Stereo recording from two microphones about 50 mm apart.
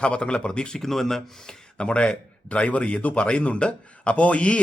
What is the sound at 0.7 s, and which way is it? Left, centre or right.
Speech, centre.